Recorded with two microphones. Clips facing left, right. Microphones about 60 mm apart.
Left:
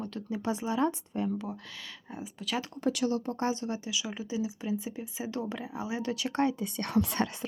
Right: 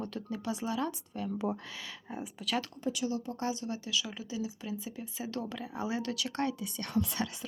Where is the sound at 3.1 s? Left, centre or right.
Left; by 6.1 s centre.